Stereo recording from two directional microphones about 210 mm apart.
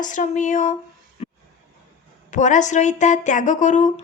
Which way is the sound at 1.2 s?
30° left (ahead or behind).